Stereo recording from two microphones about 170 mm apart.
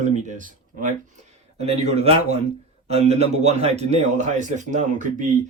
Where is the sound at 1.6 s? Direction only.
40° right (ahead or behind).